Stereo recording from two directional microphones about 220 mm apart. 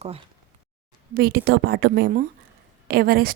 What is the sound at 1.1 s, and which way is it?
Speech, 45° right (ahead or behind).